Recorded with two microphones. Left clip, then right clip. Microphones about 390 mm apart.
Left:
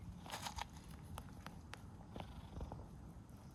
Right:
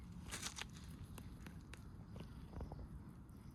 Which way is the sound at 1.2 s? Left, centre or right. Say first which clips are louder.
Left 7 dB; centre.